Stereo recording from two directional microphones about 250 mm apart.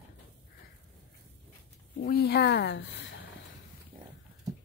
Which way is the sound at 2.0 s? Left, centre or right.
Left.